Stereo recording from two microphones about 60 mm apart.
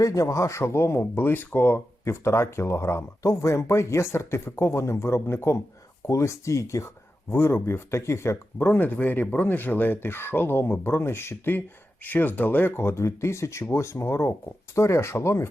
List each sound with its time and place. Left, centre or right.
0.0 s speech: left
2.0 s speech: left
6.1 s speech: left
7.3 s speech: left
8.6 s speech: left